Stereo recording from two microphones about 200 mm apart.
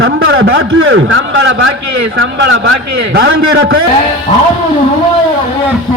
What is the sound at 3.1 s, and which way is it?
Speech, 65° right (ahead or behind).